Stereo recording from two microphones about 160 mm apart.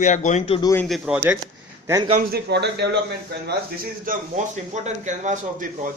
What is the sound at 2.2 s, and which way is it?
Speech, 80° right.